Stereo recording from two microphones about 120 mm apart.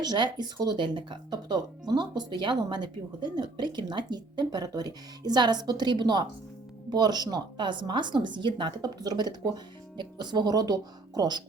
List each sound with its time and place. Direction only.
0.0 s speech: 35° right (ahead or behind)